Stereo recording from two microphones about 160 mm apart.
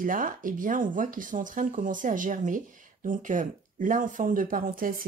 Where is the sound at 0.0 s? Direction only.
60° right (ahead or behind).